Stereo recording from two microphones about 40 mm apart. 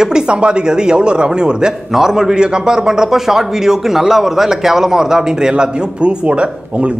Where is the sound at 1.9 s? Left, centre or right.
Centre.